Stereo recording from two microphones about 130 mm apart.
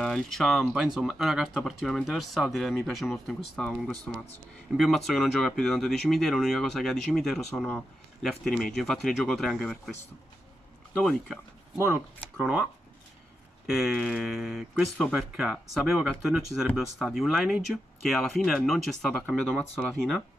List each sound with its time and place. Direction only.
0.0 s speech: 5° left (ahead or behind)
11.0 s speech: centre (ahead or behind)
13.7 s speech: 5° right (ahead or behind)